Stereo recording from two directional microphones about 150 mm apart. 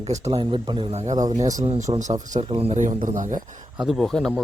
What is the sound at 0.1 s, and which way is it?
Speech, 40° right (ahead or behind).